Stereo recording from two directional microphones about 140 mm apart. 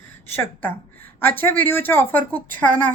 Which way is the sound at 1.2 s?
15° left (ahead or behind).